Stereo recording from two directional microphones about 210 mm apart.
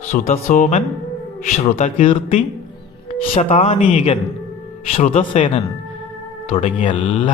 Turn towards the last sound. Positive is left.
turn(degrees=25)  # may be behind; listen again after turning